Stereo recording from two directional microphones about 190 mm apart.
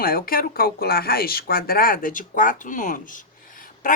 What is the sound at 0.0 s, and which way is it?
Speech, 50° left (ahead or behind).